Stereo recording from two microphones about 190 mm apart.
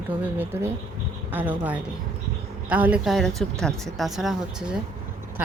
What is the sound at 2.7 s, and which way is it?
Speech, 10° right (ahead or behind).